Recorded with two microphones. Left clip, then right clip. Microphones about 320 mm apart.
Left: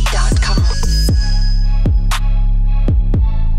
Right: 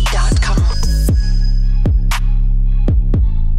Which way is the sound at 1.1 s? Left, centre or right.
Right.